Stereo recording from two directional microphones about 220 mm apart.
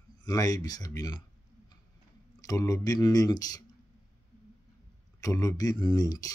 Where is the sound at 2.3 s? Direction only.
15° left (ahead or behind).